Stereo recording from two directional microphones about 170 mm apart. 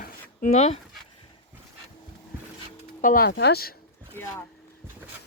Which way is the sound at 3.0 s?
55° left (ahead or behind).